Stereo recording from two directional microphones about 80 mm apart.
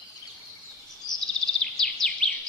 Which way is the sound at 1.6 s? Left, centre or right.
Centre.